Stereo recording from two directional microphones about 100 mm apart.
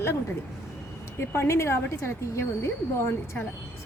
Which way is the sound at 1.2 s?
25° left (ahead or behind).